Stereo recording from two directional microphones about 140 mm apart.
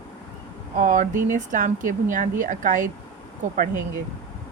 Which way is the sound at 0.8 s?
70° right (ahead or behind).